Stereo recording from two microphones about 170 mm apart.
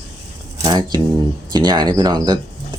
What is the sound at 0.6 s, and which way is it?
Speech, 25° right (ahead or behind).